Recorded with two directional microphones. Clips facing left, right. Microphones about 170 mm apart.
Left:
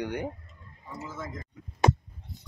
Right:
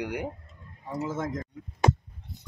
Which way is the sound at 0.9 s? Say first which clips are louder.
Right 8 dB; 90° right.